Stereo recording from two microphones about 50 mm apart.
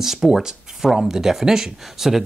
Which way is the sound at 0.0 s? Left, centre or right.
Centre.